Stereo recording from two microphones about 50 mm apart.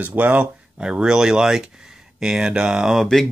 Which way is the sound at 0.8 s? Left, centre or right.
Centre.